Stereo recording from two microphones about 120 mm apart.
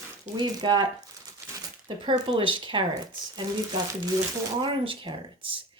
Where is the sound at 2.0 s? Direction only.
40° right (ahead or behind).